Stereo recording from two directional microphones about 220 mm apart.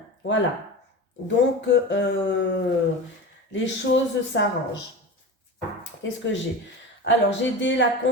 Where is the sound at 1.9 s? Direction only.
55° left (ahead or behind).